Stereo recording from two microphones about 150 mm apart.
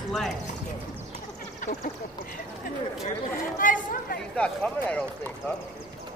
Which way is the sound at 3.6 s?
65° left (ahead or behind).